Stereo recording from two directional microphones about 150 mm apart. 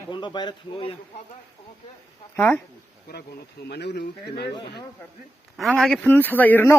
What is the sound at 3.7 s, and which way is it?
Speech, 90° left.